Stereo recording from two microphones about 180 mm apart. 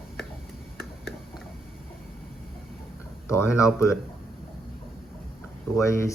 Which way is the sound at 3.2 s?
15° left (ahead or behind).